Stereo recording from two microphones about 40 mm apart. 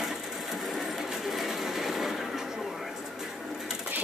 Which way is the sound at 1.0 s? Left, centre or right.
Centre.